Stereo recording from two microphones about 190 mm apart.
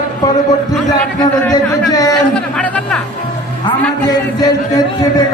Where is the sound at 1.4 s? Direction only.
20° left (ahead or behind).